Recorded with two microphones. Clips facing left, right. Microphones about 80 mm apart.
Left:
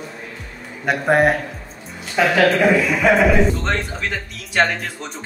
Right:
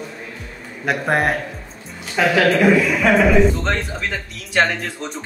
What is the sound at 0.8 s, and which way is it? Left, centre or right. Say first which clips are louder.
Speech: left 3 dB; centre.